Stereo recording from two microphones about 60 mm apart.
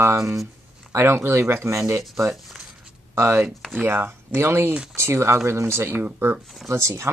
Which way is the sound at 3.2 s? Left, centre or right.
Right.